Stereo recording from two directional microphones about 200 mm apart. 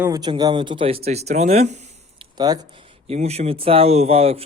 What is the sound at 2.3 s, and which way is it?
Speech, 20° right (ahead or behind).